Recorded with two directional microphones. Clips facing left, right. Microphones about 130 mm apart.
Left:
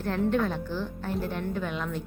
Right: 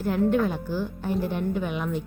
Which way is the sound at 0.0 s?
5° right (ahead or behind).